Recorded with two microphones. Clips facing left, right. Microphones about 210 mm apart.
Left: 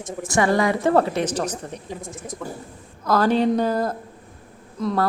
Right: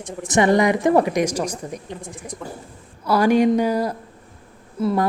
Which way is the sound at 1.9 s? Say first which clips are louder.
Left 1 dB; centre (ahead or behind).